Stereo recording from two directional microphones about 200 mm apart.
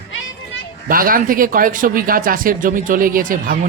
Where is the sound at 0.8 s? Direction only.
45° right (ahead or behind).